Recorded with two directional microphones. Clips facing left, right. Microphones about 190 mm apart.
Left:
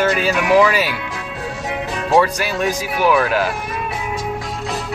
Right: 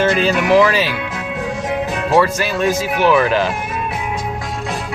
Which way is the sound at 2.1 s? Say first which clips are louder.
Even; 15° left (ahead or behind).